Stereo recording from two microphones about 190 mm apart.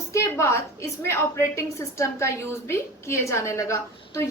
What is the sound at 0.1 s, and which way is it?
A woman's voice, 15° left (ahead or behind).